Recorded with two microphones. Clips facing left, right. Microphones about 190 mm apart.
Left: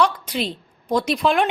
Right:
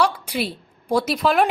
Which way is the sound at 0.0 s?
10° right (ahead or behind).